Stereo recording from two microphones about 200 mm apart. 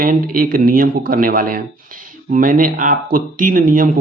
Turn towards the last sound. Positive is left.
turn(degrees=-45)  # may be behind; listen again after turning